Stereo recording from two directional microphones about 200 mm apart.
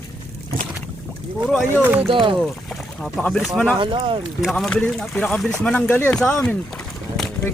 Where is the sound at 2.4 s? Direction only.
Centre (ahead or behind).